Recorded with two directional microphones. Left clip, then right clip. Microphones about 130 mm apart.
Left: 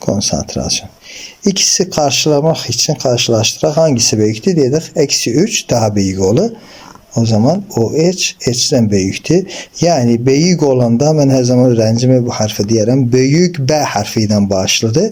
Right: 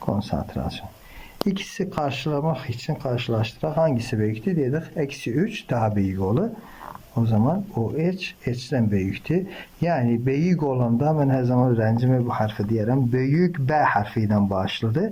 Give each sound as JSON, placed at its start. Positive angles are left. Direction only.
{"t": 0.0, "sound": "a man's voice", "side_deg": 30}